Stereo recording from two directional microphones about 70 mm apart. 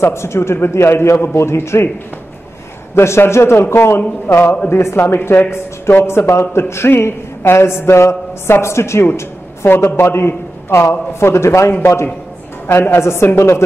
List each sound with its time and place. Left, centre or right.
0.0 s speech: left
2.9 s speech: left